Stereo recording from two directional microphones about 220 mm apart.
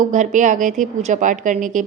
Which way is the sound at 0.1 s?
35° right (ahead or behind).